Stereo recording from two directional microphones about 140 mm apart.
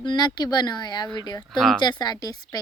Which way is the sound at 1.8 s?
30° left (ahead or behind).